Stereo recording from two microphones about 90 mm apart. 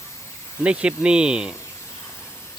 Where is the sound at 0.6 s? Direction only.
10° right (ahead or behind).